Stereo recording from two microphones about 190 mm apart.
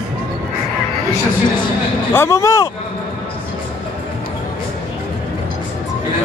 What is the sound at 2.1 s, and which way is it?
Speech, 15° left (ahead or behind).